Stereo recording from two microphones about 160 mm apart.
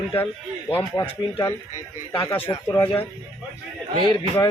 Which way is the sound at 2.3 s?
35° left (ahead or behind).